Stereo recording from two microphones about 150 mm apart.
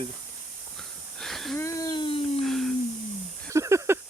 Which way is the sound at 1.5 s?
20° left (ahead or behind).